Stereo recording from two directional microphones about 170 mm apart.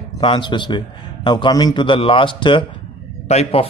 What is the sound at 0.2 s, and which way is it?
A man's voice, 30° left (ahead or behind).